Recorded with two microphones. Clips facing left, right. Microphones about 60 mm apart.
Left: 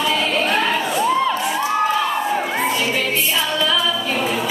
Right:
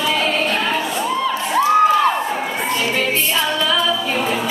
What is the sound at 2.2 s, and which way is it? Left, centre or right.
Crowd, centre.